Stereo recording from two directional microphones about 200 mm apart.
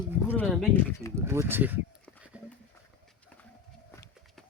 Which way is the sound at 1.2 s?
10° right (ahead or behind).